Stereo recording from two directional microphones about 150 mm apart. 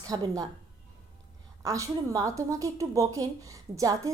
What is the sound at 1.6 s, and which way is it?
A woman's voice, 20° right (ahead or behind).